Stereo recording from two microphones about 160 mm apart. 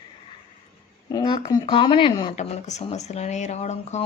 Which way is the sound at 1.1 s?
25° left (ahead or behind).